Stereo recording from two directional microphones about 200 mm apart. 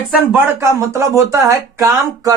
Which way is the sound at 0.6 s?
15° right (ahead or behind).